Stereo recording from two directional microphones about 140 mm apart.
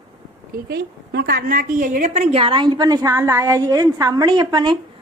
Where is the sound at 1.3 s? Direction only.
90° right; by 4.8 s 30° right (ahead or behind).